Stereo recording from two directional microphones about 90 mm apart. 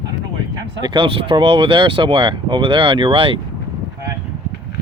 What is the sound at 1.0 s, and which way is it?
Speech, 80° right.